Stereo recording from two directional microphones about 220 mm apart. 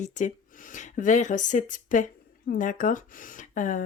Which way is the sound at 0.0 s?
35° left (ahead or behind).